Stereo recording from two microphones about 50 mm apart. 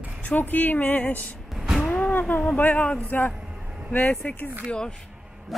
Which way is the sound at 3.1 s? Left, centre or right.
Left.